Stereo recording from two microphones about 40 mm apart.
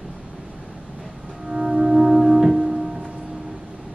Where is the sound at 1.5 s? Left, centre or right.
Centre.